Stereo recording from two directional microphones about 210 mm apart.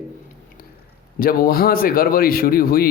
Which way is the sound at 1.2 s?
45° left (ahead or behind).